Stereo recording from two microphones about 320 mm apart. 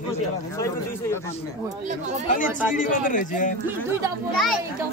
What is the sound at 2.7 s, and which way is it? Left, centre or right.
Speech, left.